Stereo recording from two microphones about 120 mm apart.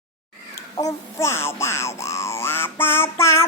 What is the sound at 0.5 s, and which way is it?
Music, 25° left (ahead or behind).